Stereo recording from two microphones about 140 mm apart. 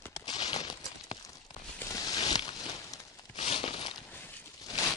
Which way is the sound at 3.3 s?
40° left (ahead or behind).